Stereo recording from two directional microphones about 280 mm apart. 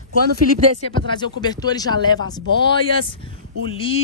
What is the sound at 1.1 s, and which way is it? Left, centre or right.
Speech, centre.